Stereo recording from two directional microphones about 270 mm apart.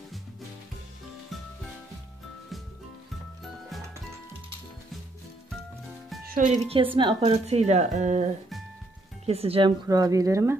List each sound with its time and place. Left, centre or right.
6.2 s speech: right; by 10.6 s centre